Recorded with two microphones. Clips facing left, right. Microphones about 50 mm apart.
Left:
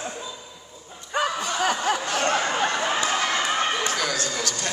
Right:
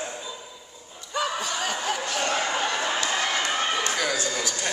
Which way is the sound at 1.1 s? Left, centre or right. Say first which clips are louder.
Left 3 dB; left.